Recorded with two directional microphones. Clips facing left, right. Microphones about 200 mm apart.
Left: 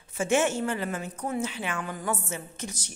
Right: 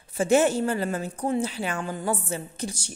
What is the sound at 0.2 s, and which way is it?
A woman's voice, 35° right (ahead or behind).